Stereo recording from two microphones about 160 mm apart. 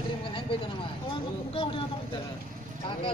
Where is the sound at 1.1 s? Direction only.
35° left (ahead or behind).